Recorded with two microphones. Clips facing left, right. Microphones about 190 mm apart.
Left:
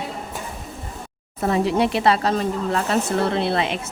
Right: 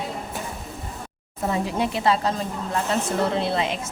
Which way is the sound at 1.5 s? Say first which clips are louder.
Left 6 dB; 70° left (ahead or behind).